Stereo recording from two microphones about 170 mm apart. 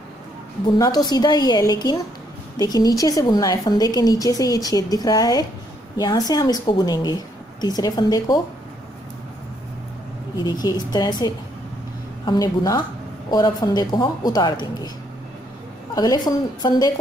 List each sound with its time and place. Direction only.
0.7 s a woman's voice: 20° left (ahead or behind)
10.3 s a woman's voice: 25° left (ahead or behind)
15.9 s a woman's voice: 20° left (ahead or behind)